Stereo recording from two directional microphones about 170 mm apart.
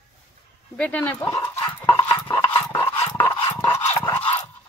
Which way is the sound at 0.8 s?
10° left (ahead or behind).